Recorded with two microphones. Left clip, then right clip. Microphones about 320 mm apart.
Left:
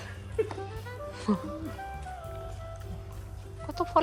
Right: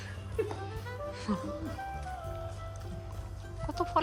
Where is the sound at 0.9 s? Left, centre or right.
Centre.